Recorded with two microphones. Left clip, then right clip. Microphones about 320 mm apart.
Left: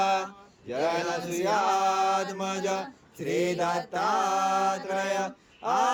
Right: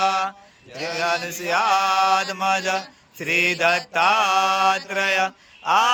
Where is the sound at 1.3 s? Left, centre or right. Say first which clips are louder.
Right 1 dB; left.